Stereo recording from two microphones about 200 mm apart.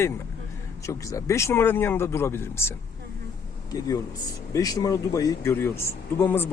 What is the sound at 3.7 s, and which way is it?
Speech, 20° left (ahead or behind).